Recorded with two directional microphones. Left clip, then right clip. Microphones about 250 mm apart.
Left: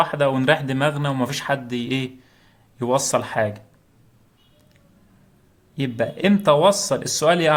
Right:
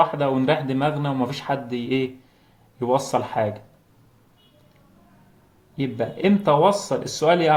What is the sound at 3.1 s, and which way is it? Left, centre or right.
Speech, left.